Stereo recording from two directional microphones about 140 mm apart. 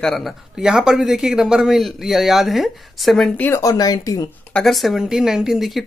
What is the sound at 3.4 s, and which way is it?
Speech, 20° left (ahead or behind).